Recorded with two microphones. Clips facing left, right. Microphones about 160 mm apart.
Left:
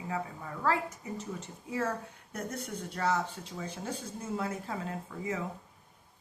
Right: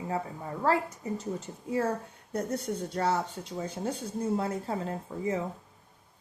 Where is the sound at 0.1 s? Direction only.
35° right (ahead or behind).